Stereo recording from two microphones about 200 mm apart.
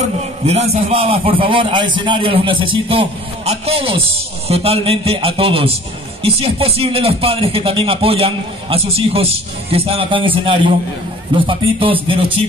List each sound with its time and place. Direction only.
0.0 s speech: 30° right (ahead or behind)